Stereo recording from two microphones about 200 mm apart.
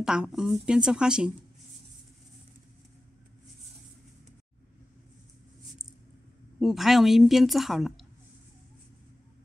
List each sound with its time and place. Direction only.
0.0 s a woman's voice: 5° right (ahead or behind)
6.6 s a woman's voice: centre (ahead or behind)